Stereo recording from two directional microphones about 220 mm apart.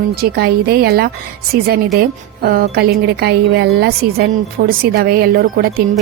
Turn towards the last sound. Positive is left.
turn(degrees=-45)  # may be behind; listen again after turning